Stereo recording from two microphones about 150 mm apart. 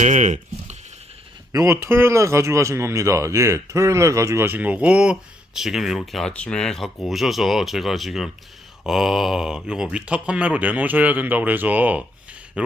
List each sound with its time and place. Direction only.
0.0 s speech: 55° right (ahead or behind)
1.5 s a man's voice: 20° right (ahead or behind)